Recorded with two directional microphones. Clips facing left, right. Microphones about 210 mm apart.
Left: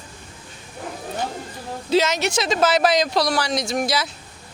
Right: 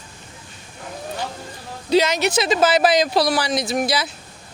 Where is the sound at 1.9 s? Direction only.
Centre (ahead or behind).